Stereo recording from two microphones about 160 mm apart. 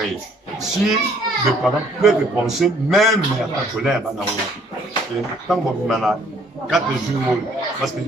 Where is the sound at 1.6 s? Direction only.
Centre (ahead or behind).